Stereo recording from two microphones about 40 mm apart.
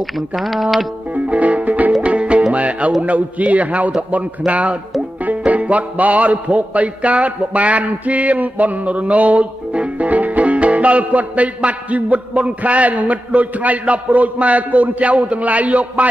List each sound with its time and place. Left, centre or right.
0.0 s speech: centre
1.1 s music: right
1.9 s music: right
2.1 s music: right